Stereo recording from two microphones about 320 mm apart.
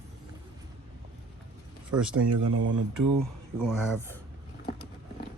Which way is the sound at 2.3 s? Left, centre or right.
Right.